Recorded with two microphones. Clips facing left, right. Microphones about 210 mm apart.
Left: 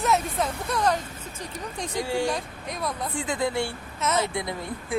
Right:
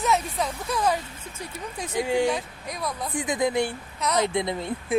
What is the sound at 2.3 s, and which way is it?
Speech, centre (ahead or behind).